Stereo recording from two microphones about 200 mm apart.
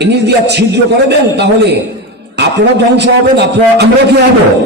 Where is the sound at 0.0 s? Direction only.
55° right (ahead or behind).